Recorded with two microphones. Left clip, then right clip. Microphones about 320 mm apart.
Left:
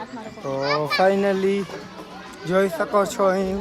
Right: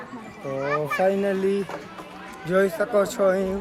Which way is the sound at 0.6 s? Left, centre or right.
Left.